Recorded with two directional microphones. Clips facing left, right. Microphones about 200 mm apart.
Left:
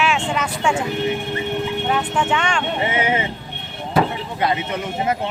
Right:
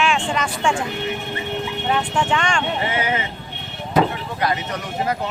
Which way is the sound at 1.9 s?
5° left (ahead or behind).